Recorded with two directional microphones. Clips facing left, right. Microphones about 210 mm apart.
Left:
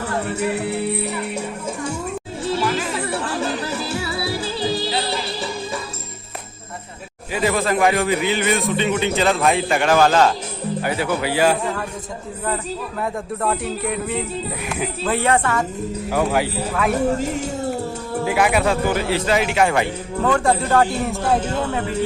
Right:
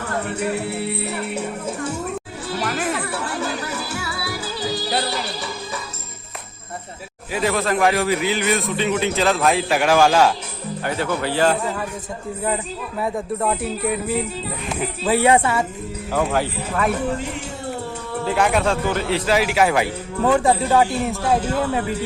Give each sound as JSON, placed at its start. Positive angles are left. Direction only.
{"t": 0.5, "sound": "speech", "side_deg": 15}
{"t": 2.6, "sound": "music", "side_deg": -55}
{"t": 3.1, "sound": "music", "side_deg": 25}
{"t": 7.3, "sound": "a man's voice", "side_deg": 0}
{"t": 10.8, "sound": "speech", "side_deg": 10}
{"t": 11.6, "sound": "a man's voice", "side_deg": -5}
{"t": 13.0, "sound": "a man's voice", "side_deg": 0}
{"t": 16.1, "sound": "speech", "side_deg": 10}
{"t": 16.9, "sound": "speech", "side_deg": 40}
{"t": 18.3, "sound": "a man's voice", "side_deg": 10}